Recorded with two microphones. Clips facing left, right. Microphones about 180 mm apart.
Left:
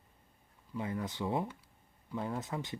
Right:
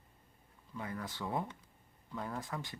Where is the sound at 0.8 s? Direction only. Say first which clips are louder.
Left 5 dB; 20° left (ahead or behind).